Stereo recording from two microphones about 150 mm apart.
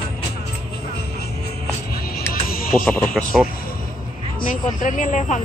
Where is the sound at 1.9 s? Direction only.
90° left.